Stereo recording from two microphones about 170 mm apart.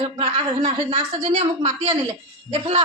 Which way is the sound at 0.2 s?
35° right (ahead or behind).